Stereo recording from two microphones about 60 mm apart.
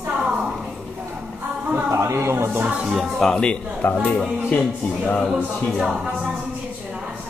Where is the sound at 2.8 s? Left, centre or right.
Centre.